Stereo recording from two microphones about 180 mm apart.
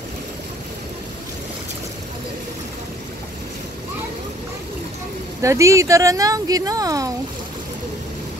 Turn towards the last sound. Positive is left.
turn(degrees=-20)  # may be behind; listen again after turning